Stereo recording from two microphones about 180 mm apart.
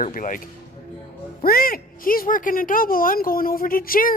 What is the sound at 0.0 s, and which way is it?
Speech, 45° left (ahead or behind).